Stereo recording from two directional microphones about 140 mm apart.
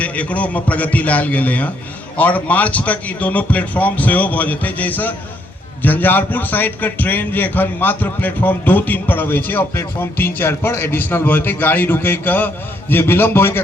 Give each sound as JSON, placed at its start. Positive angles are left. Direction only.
{"t": 0.0, "sound": "a man's voice", "side_deg": 10}